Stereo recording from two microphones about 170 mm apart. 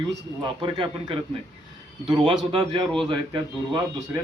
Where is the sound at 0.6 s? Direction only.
30° right (ahead or behind).